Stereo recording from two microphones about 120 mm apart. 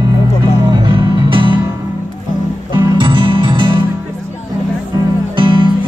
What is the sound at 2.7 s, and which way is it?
Music, 35° right (ahead or behind).